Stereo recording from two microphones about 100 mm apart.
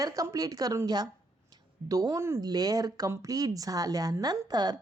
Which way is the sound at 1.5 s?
40° right (ahead or behind).